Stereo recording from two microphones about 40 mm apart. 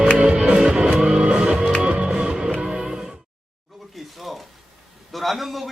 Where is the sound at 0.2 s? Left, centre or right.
Right.